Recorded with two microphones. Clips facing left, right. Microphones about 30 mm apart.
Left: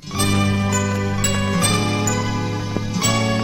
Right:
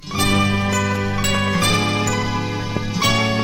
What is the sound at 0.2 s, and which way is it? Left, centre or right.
Jingle, centre.